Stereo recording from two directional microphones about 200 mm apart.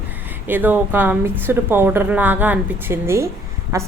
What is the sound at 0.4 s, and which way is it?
A woman's voice, 10° right (ahead or behind).